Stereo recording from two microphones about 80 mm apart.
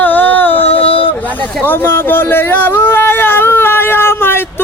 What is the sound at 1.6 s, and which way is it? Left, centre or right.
Speech, left.